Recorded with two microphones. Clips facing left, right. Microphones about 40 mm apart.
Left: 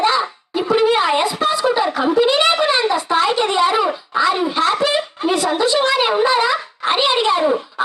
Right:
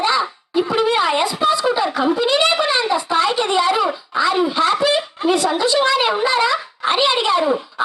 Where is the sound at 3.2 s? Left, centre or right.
Left.